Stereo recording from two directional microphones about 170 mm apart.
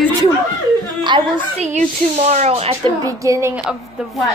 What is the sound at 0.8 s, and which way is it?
Chuckle, 25° right (ahead or behind).